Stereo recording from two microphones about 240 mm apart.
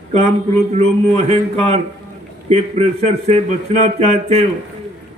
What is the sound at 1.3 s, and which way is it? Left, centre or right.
A man's voice, right.